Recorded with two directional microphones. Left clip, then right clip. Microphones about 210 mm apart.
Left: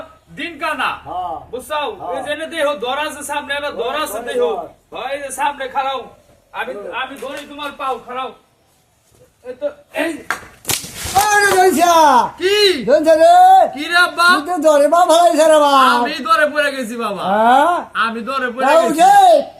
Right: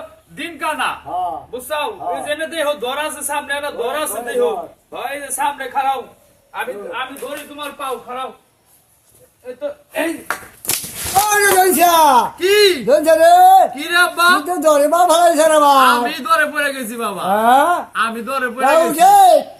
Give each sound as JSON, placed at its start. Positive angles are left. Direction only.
{"t": 0.3, "sound": "a man's voice", "side_deg": 5}
{"t": 9.6, "sound": "speech", "side_deg": 0}
{"t": 11.1, "sound": "speech", "side_deg": -20}
{"t": 12.4, "sound": "speech", "side_deg": -10}
{"t": 12.8, "sound": "a man's voice", "side_deg": -20}
{"t": 16.0, "sound": "a man's voice", "side_deg": -5}
{"t": 17.3, "sound": "a man's voice", "side_deg": -15}
{"t": 18.9, "sound": "speech", "side_deg": -15}